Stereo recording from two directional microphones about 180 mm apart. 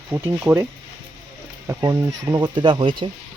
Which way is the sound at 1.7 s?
15° right (ahead or behind).